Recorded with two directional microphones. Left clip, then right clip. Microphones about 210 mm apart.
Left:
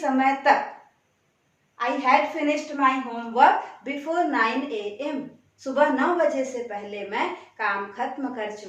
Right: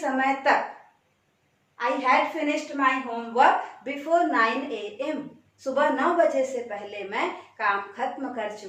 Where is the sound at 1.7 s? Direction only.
15° left (ahead or behind).